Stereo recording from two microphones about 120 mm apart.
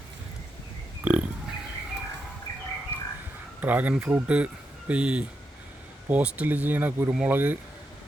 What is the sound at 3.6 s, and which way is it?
Speech, 15° right (ahead or behind).